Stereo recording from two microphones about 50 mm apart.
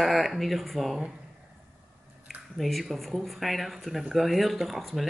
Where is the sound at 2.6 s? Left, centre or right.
Centre.